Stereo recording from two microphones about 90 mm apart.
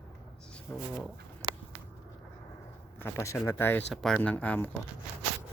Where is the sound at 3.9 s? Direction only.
5° left (ahead or behind).